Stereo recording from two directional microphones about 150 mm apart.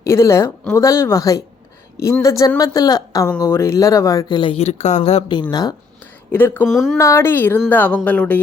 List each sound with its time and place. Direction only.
0.0 s a woman's voice: 20° left (ahead or behind); by 5.2 s 45° left (ahead or behind)
5.3 s a woman's voice: 30° left (ahead or behind)
6.3 s speech: 15° left (ahead or behind)
6.7 s speech: centre (ahead or behind)
6.9 s speech: 20° left (ahead or behind)